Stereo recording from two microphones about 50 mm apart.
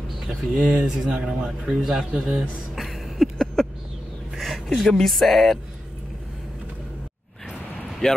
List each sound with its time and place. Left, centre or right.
0.3 s speech: centre
0.7 s a man's voice: centre
2.7 s a sound: centre
4.8 s speech: centre
8.0 s speech: centre